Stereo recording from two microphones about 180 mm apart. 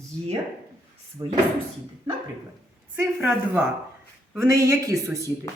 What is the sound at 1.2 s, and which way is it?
Speech, 20° right (ahead or behind).